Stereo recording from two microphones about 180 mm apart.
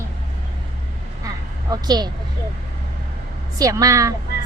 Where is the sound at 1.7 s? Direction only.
20° right (ahead or behind).